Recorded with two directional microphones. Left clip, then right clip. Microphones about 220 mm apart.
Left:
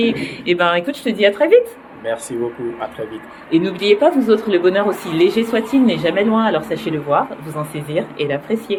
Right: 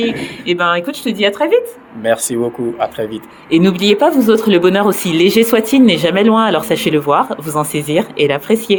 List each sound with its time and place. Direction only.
0.0 s speech: 10° right (ahead or behind)
3.5 s speech: 50° right (ahead or behind)
3.8 s speech: 35° right (ahead or behind)